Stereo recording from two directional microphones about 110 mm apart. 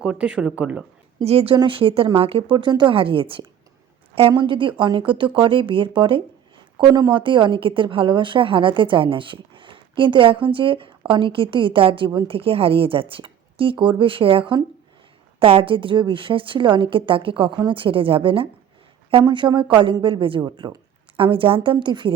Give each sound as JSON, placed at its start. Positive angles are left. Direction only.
{"t": 0.0, "sound": "speech", "side_deg": -10}
{"t": 1.2, "sound": "speech", "side_deg": -65}
{"t": 1.5, "sound": "a woman's voice", "side_deg": -50}
{"t": 6.7, "sound": "a woman's voice", "side_deg": -40}